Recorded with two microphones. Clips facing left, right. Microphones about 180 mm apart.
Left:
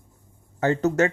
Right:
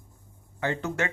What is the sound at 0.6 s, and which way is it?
Speech, 40° left (ahead or behind).